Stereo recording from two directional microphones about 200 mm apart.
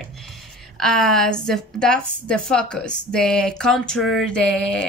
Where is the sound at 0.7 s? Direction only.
Centre (ahead or behind).